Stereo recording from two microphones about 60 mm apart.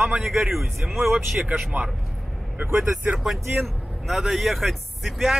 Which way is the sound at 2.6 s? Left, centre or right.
Right.